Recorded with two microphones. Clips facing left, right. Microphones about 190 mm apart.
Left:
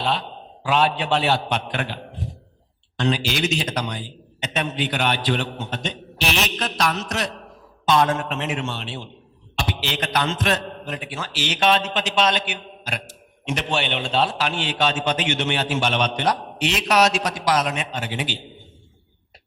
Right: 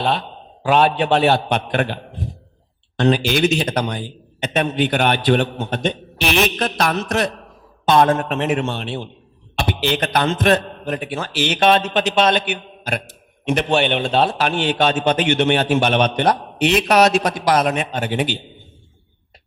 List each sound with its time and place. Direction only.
0.0 s a man's voice: 55° right (ahead or behind)